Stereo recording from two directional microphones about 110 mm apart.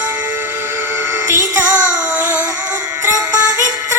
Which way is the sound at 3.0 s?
30° right (ahead or behind).